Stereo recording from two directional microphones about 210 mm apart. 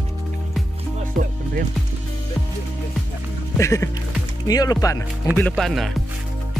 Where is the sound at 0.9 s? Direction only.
40° right (ahead or behind).